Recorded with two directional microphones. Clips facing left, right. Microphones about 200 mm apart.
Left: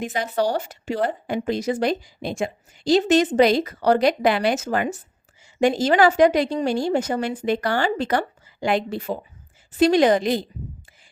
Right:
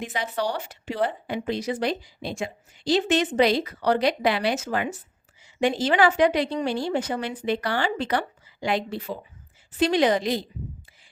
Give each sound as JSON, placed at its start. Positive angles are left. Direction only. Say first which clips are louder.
{"t": 0.0, "sound": "speech", "louder": "left 5 dB", "side_deg": 45}